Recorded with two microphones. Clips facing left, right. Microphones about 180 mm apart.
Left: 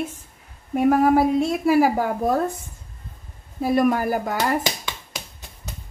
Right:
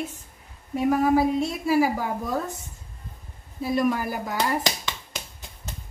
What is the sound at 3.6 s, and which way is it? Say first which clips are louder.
Speech: left 5 dB; 55° left (ahead or behind).